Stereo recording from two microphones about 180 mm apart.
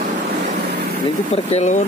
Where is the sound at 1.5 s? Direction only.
40° left (ahead or behind).